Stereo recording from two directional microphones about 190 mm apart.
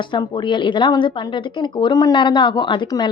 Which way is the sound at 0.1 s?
25° left (ahead or behind).